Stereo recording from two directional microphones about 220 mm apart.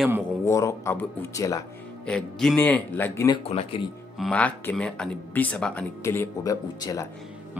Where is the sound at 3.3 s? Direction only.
25° left (ahead or behind).